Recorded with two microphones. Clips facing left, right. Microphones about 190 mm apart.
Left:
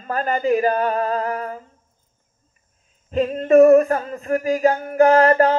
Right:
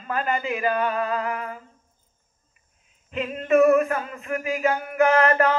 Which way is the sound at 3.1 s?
40° left (ahead or behind).